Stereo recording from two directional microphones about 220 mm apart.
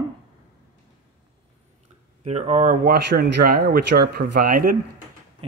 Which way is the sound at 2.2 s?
30° right (ahead or behind).